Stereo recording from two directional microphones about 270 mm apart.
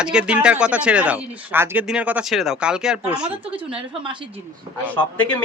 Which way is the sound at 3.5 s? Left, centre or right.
Centre.